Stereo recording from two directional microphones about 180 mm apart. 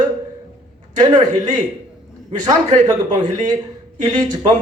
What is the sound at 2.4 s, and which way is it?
A man's voice, 20° right (ahead or behind).